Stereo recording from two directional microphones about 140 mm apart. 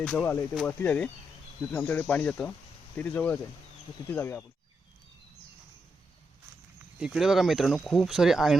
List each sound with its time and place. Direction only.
0.0 s speech: 10° left (ahead or behind)
7.0 s speech: 5° right (ahead or behind)